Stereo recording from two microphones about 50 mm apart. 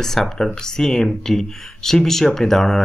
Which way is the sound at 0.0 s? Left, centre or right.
Centre.